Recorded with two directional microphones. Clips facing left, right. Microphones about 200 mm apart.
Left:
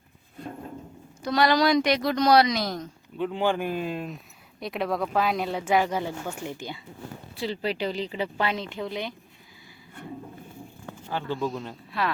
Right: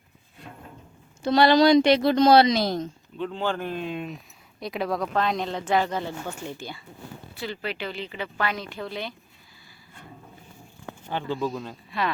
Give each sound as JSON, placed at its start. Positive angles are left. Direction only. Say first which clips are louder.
{"t": 1.2, "sound": "a woman's voice", "louder": "right 4 dB", "side_deg": -30}
{"t": 3.2, "sound": "speech", "louder": "left 3 dB", "side_deg": 15}
{"t": 7.3, "sound": "speech", "louder": "left 4 dB", "side_deg": 30}
{"t": 11.3, "sound": "speech", "louder": "right 1 dB", "side_deg": 0}